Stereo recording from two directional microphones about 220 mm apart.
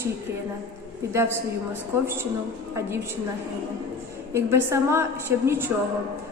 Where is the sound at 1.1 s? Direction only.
10° right (ahead or behind).